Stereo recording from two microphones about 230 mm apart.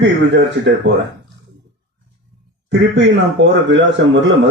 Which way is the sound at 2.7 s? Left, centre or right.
Right.